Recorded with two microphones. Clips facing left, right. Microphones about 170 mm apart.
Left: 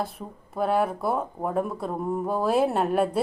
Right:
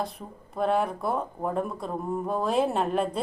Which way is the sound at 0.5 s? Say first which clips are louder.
Left 1 dB; 5° left (ahead or behind).